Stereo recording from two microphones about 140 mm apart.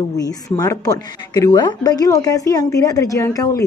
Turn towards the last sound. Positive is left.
turn(degrees=20)  # may be behind; listen again after turning